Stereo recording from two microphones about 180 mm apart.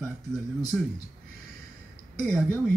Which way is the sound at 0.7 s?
Centre (ahead or behind).